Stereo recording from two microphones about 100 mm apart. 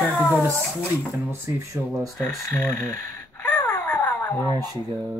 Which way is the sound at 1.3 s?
25° right (ahead or behind).